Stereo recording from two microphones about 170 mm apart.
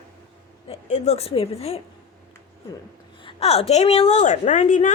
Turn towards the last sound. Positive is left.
turn(degrees=45)  # may be behind; listen again after turning